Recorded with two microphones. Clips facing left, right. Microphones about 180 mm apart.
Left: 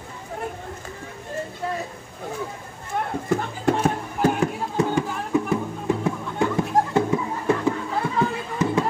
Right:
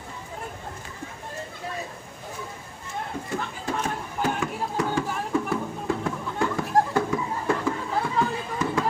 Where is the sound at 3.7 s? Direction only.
65° left (ahead or behind).